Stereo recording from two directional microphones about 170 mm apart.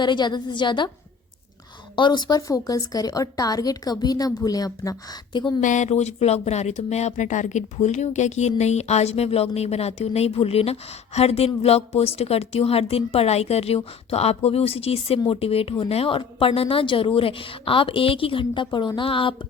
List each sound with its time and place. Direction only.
0.0 s speech: 25° left (ahead or behind)
2.0 s speech: 25° left (ahead or behind)
5.5 s speech: 45° left (ahead or behind)